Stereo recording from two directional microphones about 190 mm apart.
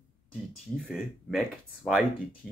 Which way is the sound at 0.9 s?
Centre (ahead or behind).